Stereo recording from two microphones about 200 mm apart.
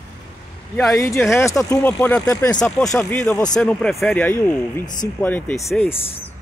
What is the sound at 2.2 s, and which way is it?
Speech, 20° left (ahead or behind).